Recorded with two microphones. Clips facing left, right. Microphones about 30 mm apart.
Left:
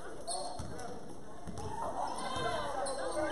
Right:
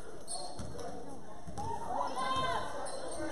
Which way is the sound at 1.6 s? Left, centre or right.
Centre.